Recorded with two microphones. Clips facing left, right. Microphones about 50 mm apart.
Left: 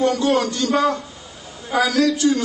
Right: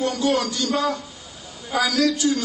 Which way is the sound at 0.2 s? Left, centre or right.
Centre.